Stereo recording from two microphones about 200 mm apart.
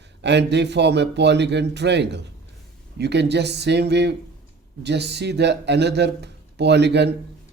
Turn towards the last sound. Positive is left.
turn(degrees=-60)  # may be behind; listen again after turning